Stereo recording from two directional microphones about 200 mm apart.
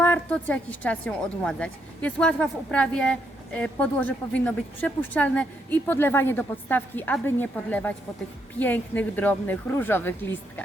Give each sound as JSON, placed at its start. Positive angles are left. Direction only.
{"t": 0.0, "sound": "a woman's voice", "side_deg": 10}